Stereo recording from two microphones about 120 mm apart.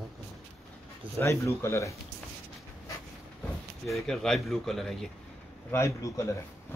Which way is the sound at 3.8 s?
Centre (ahead or behind).